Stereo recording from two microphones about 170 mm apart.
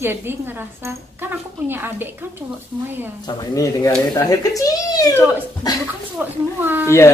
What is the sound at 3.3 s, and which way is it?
Speech, 20° left (ahead or behind).